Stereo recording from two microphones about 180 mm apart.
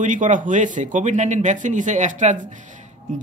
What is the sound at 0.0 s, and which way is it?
A man's voice, 45° right (ahead or behind).